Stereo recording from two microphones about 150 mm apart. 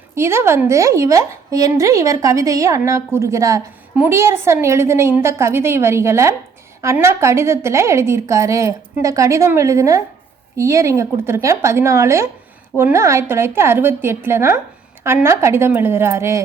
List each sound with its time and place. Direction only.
0.1 s a woman's voice: 15° right (ahead or behind)